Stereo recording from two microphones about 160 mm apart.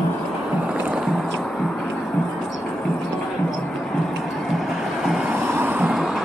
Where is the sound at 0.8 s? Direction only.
5° right (ahead or behind).